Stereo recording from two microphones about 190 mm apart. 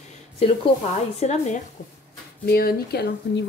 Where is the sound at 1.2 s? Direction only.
35° left (ahead or behind).